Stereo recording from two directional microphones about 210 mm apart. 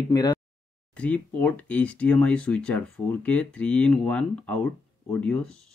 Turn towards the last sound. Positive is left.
turn(degrees=5)  # may be behind; listen again after turning